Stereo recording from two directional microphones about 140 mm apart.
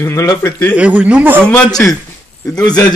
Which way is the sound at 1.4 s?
5° left (ahead or behind).